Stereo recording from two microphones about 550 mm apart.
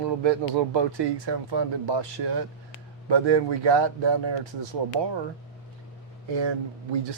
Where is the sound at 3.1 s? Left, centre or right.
Right.